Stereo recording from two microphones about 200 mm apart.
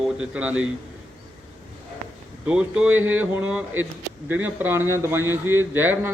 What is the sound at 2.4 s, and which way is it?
A man's voice, 5° right (ahead or behind).